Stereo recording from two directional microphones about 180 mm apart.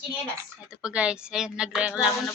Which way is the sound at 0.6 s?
5° right (ahead or behind).